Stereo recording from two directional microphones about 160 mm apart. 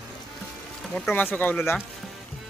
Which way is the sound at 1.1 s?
10° left (ahead or behind).